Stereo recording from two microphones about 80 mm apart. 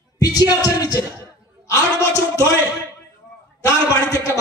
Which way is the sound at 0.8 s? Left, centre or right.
Left.